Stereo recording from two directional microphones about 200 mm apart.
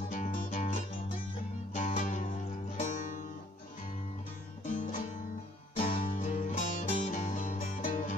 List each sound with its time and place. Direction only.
0.1 s music: 40° left (ahead or behind)
1.8 s music: 40° left (ahead or behind)
4.6 s music: 40° left (ahead or behind)
6.1 s music: 35° left (ahead or behind)